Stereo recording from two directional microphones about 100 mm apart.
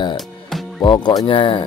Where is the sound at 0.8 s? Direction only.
50° left (ahead or behind).